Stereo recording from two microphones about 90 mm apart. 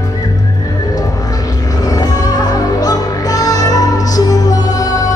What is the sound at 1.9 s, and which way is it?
Music, 45° left (ahead or behind).